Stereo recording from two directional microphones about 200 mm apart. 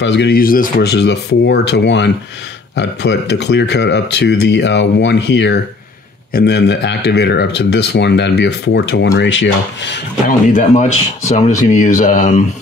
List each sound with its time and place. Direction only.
0.0 s speech: 60° left (ahead or behind)
10.2 s speech: 40° left (ahead or behind)